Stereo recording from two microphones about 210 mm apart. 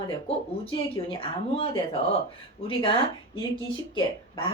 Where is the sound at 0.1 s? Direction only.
25° left (ahead or behind).